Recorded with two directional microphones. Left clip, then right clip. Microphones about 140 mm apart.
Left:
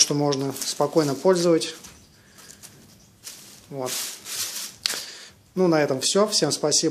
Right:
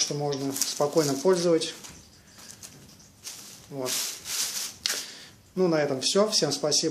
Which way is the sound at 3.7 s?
25° left (ahead or behind).